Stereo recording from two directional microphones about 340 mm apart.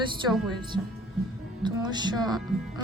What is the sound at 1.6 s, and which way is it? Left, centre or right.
Speech, centre.